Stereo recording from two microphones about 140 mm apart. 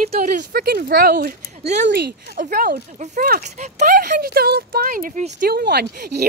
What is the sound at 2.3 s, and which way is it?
Speech, 90° right.